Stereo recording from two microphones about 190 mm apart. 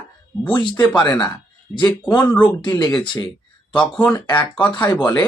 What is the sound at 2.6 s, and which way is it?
Speech, 25° left (ahead or behind).